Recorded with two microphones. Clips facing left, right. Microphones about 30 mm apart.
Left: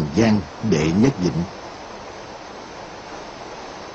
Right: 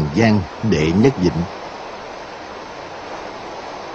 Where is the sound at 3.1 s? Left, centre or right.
Right.